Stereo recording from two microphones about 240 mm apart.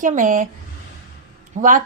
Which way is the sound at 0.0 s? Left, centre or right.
Right.